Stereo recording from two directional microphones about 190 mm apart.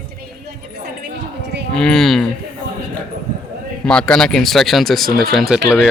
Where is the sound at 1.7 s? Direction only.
5° left (ahead or behind).